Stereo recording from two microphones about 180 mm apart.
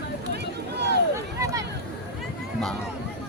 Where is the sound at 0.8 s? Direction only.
70° right (ahead or behind).